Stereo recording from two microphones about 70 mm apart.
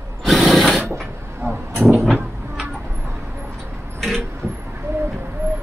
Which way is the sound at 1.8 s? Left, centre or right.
Right.